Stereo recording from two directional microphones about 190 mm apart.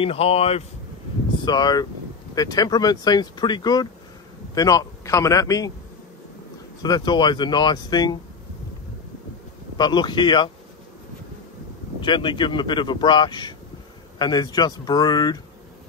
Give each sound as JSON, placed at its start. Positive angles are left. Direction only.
{"t": 0.0, "sound": "speech", "side_deg": 30}
{"t": 1.4, "sound": "speech", "side_deg": 20}
{"t": 6.8, "sound": "speech", "side_deg": 20}
{"t": 9.8, "sound": "speech", "side_deg": 25}
{"t": 12.0, "sound": "speech", "side_deg": 25}